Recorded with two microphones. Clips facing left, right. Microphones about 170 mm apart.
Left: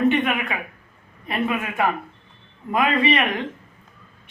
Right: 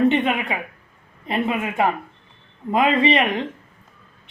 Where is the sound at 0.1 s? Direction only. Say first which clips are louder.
Right 1 dB; 25° right (ahead or behind).